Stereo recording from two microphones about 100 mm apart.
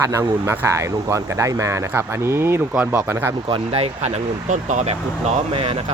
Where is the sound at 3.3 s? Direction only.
55° right (ahead or behind).